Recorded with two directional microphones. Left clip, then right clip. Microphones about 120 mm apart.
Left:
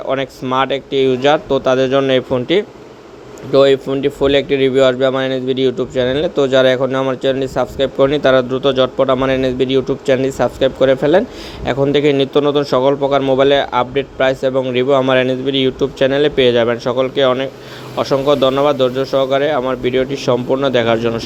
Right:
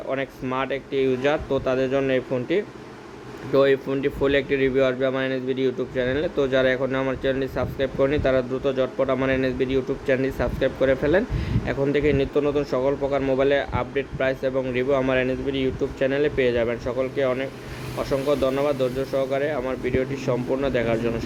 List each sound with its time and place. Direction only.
0.1 s a man's voice: 50° left (ahead or behind)
3.5 s a man's voice: 35° left (ahead or behind); by 21.2 s 55° left (ahead or behind)